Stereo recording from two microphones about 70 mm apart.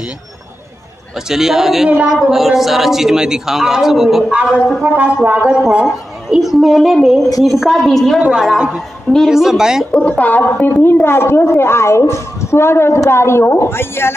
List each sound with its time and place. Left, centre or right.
1.3 s a man's voice: centre
1.9 s a woman's voice: right
2.3 s a man's voice: centre
4.9 s a woman's voice: centre
8.3 s speech: centre
9.8 s a woman's voice: left